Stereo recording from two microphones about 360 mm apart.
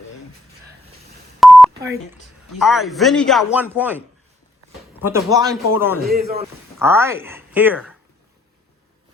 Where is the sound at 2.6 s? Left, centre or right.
Centre.